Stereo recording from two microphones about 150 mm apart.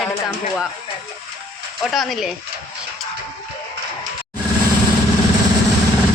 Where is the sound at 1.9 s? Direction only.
Centre (ahead or behind).